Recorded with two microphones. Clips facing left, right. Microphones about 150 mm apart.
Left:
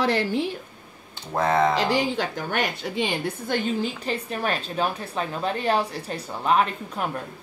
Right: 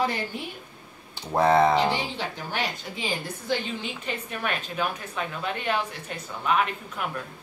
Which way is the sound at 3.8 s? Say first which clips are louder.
Left 6 dB; 35° left (ahead or behind).